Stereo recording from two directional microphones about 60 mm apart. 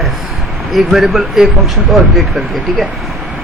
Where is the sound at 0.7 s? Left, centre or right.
Centre.